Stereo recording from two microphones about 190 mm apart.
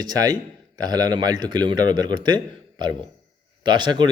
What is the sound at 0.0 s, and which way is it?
A man's voice, 20° right (ahead or behind).